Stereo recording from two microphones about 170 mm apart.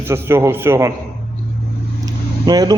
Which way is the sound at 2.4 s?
25° right (ahead or behind).